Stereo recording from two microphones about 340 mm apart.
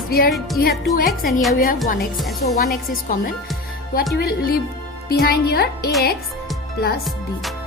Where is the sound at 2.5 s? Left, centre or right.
Left.